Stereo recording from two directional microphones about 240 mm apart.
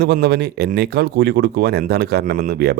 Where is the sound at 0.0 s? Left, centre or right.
Right.